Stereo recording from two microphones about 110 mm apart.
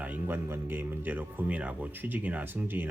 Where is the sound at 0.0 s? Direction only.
15° right (ahead or behind).